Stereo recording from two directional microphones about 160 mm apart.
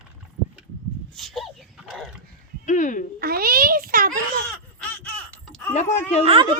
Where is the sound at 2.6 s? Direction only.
50° left (ahead or behind).